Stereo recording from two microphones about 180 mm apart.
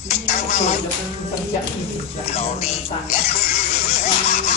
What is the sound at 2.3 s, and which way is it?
Oink, 35° left (ahead or behind).